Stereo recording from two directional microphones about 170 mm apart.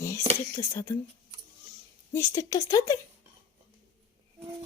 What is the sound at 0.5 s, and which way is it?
Speech, 15° left (ahead or behind).